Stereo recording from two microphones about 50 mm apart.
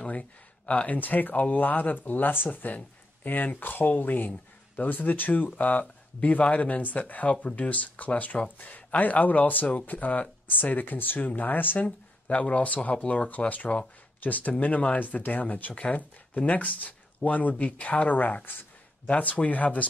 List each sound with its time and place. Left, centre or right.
0.0 s speech: left
19.0 s speech: left